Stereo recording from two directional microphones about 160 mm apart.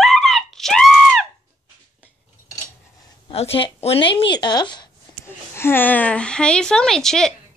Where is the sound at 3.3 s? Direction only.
40° left (ahead or behind).